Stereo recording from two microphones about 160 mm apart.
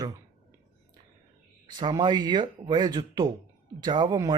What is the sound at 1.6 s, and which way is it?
Speech, 30° right (ahead or behind).